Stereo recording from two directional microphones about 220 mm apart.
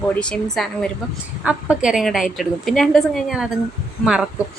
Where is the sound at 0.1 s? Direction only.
5° left (ahead or behind).